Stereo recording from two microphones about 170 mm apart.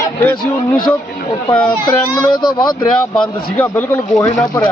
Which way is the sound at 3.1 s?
10° left (ahead or behind).